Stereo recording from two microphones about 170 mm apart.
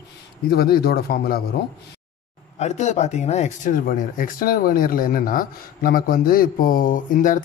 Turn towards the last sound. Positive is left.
turn(degrees=50)  # may be behind; listen again after turning